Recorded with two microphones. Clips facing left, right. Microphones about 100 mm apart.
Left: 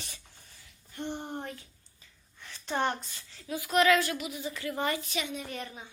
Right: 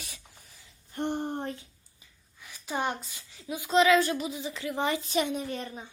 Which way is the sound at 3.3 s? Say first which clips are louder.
Right 3 dB; 15° right (ahead or behind).